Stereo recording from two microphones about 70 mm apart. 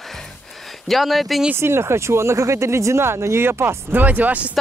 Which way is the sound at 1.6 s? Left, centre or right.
Right.